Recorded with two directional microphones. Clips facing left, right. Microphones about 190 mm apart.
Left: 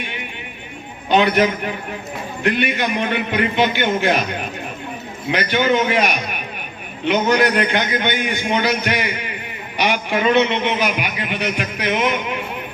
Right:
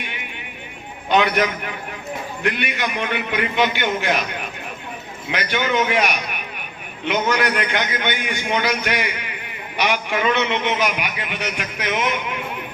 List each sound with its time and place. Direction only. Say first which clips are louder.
1.1 s a man's voice: left 3 dB; 30° left (ahead or behind)
5.3 s a man's voice: left 4 dB; 30° left (ahead or behind)
7.1 s a man's voice: left 4 dB; 30° left (ahead or behind)